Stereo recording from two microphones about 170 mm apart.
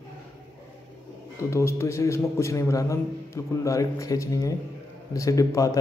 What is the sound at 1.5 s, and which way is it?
A man's voice, 15° left (ahead or behind).